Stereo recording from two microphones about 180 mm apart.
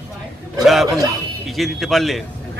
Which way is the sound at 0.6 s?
Centre (ahead or behind).